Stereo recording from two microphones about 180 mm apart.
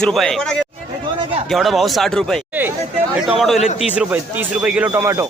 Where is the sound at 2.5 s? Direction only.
10° right (ahead or behind).